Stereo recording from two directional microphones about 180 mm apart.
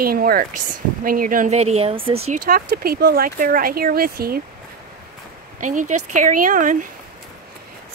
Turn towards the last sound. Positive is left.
turn(degrees=-45)  # may be behind; listen again after turning